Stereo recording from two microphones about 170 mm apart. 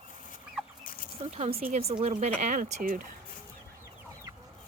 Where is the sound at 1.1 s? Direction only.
40° right (ahead or behind).